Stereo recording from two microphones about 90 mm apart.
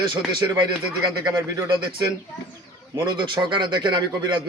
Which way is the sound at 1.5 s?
60° right (ahead or behind).